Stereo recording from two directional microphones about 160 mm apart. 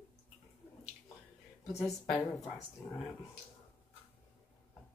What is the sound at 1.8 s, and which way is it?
Speech, centre (ahead or behind).